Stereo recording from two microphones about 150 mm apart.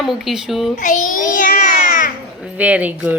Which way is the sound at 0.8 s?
55° left (ahead or behind).